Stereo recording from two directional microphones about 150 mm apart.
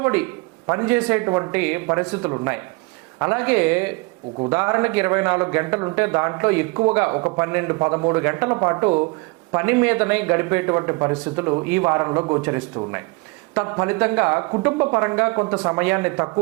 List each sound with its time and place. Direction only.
0.0 s a man's voice: 10° right (ahead or behind)
0.9 s speech: 5° right (ahead or behind)
1.2 s speech: 20° right (ahead or behind)
13.5 s speech: 10° right (ahead or behind)